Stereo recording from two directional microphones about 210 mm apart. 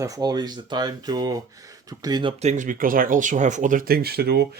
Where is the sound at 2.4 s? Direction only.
35° right (ahead or behind).